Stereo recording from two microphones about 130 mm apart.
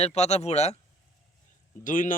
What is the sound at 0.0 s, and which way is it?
Speech, 55° left (ahead or behind).